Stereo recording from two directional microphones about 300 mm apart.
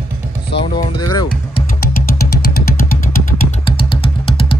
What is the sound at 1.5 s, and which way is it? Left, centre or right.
Music, left.